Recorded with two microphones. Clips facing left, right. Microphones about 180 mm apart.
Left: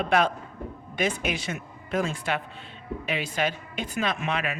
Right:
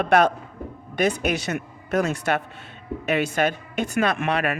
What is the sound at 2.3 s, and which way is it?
A man's voice, 55° right (ahead or behind).